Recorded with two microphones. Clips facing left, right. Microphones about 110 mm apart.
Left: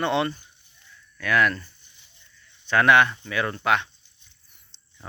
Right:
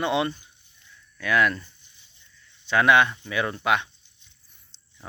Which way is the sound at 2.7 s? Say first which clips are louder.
Left 1 dB; 15° right (ahead or behind).